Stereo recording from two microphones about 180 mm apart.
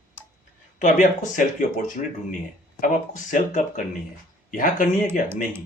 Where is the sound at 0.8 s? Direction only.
45° left (ahead or behind).